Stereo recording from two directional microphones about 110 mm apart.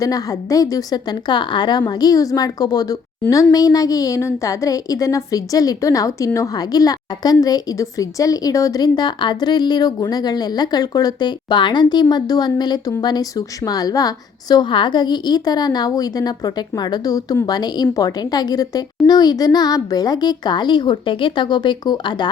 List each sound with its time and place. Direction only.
0.0 s a woman's voice: 35° left (ahead or behind)
2.0 s a woman's voice: 35° left (ahead or behind)